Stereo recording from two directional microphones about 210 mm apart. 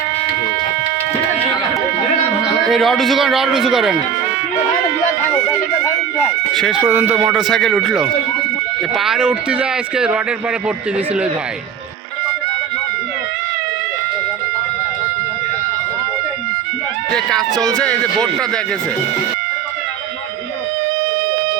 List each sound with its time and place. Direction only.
2.6 s speech: centre (ahead or behind)
6.5 s speech: centre (ahead or behind)
17.2 s speech: centre (ahead or behind)